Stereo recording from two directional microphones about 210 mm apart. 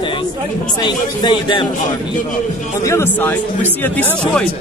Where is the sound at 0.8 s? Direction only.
20° left (ahead or behind).